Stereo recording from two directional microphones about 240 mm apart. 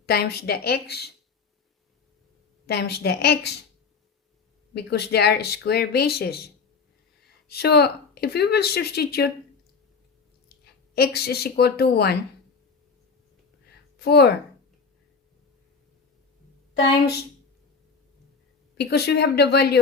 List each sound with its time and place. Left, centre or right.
0.0 s speech: left
2.6 s a woman's voice: left
4.7 s speech: left
10.9 s speech: left
14.0 s a woman's voice: left
18.8 s a woman's voice: left